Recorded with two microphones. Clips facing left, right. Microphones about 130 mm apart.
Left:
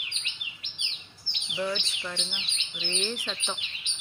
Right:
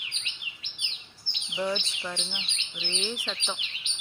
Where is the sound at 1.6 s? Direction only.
10° right (ahead or behind).